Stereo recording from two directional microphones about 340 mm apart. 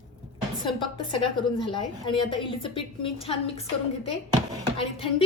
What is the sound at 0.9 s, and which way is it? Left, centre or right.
A woman's voice, centre.